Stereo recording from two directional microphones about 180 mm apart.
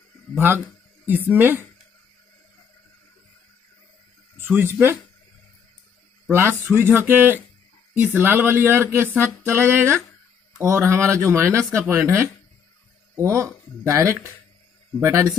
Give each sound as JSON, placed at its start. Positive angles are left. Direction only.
{"t": 0.3, "sound": "speech", "side_deg": -10}
{"t": 4.4, "sound": "a sound", "side_deg": -10}
{"t": 6.3, "sound": "speech", "side_deg": -15}